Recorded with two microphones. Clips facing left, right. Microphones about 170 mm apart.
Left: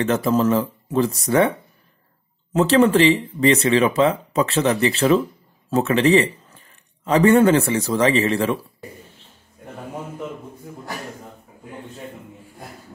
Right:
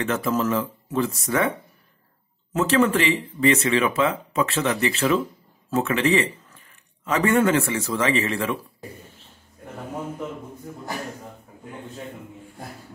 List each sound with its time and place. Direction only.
0.0 s speech: 35° left (ahead or behind)
2.5 s a man's voice: 30° left (ahead or behind)